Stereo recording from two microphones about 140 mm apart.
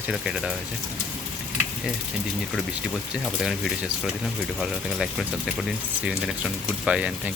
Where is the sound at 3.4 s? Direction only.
Centre (ahead or behind).